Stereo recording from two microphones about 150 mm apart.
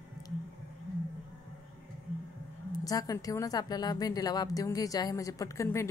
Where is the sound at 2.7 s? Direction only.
25° left (ahead or behind).